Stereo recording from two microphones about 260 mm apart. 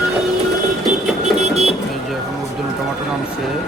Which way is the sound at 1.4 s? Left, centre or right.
Right.